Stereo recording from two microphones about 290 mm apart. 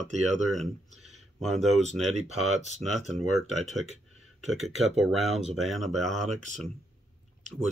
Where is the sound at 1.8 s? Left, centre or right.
Right.